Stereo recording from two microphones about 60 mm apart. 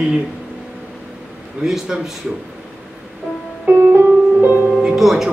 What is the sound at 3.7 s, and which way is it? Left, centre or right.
Music, right.